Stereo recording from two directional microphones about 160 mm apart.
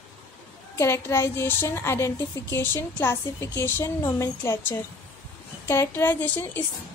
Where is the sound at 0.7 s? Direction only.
15° left (ahead or behind).